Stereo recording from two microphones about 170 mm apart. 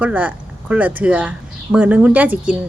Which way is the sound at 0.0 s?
10° right (ahead or behind).